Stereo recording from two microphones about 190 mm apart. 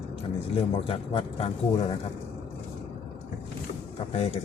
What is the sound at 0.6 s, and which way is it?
Speech, 30° left (ahead or behind).